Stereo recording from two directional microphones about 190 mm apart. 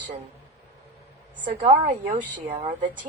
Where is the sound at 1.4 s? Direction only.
40° right (ahead or behind).